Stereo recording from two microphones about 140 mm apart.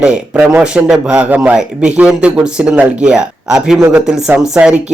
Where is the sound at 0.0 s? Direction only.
5° right (ahead or behind).